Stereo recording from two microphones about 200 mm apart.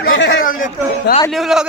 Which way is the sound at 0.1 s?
60° left (ahead or behind).